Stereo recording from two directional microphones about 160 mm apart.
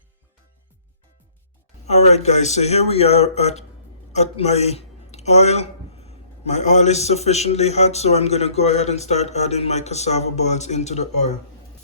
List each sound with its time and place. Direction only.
1.9 s speech: 40° left (ahead or behind)